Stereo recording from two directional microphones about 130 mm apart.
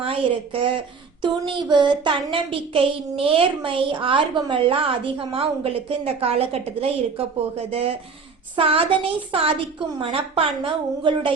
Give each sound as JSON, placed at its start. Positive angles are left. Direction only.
{"t": 0.0, "sound": "speech", "side_deg": -45}